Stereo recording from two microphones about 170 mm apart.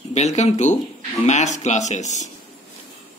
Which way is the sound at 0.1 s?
40° left (ahead or behind).